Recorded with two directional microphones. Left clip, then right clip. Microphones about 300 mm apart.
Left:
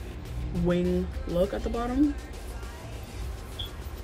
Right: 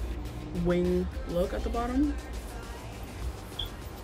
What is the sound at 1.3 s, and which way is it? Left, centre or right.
Speech, centre.